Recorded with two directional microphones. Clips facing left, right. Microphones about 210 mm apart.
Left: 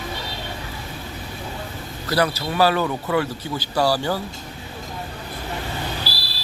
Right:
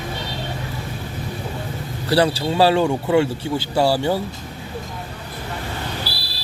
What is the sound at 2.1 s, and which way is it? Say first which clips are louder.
Speech: right 4 dB; 30° right (ahead or behind).